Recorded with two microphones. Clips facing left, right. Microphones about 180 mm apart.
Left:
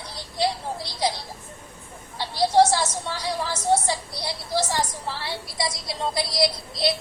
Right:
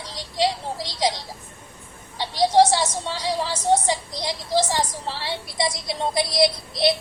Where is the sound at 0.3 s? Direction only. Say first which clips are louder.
Right 2 dB; 90° right.